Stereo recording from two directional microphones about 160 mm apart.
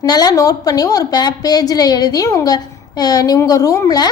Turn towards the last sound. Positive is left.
turn(degrees=25)  # may be behind; listen again after turning